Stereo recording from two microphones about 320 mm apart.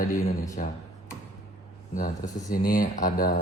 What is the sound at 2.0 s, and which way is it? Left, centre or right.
Speech, left.